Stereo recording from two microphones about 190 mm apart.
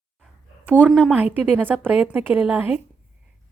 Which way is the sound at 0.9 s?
5° right (ahead or behind).